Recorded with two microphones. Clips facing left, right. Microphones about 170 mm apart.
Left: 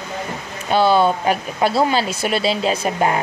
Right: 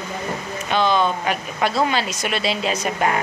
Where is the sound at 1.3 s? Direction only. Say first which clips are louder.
Left 4 dB; 35° left (ahead or behind).